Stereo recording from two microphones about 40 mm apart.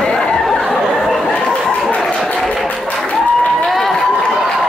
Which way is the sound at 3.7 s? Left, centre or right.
Centre.